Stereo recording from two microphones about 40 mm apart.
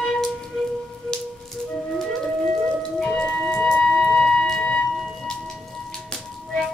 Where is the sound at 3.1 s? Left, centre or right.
Centre.